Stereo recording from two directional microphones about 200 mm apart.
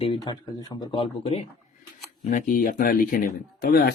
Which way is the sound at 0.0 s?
25° left (ahead or behind).